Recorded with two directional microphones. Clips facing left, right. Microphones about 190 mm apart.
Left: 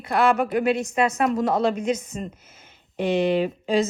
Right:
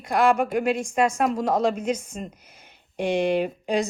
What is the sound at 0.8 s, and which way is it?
A woman's voice, 10° right (ahead or behind).